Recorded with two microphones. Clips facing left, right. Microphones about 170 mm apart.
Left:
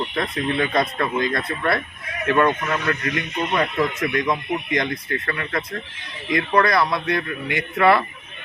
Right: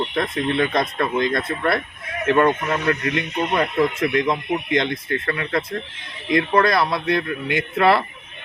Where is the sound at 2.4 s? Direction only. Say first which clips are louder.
Right 1 dB; 20° right (ahead or behind).